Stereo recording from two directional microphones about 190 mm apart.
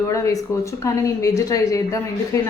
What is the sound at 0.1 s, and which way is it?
Speech, 15° left (ahead or behind).